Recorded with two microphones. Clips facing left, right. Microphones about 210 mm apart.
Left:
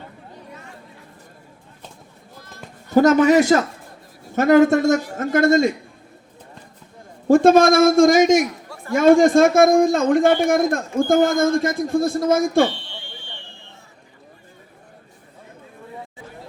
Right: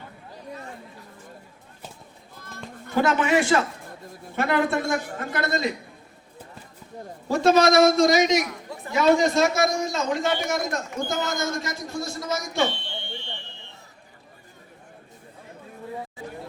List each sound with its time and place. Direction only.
2.9 s a man's voice: 40° left (ahead or behind)
7.3 s a man's voice: 50° left (ahead or behind)
12.9 s fire alarm: 25° right (ahead or behind)